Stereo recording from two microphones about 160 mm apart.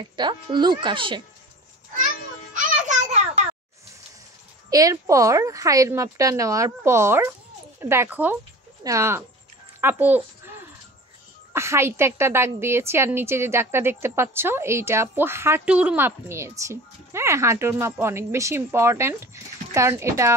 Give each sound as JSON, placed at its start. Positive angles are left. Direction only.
{"t": 0.0, "sound": "speech", "side_deg": -30}
{"t": 2.5, "sound": "music", "side_deg": -50}
{"t": 4.6, "sound": "a woman's voice", "side_deg": -20}
{"t": 11.5, "sound": "a woman's voice", "side_deg": -15}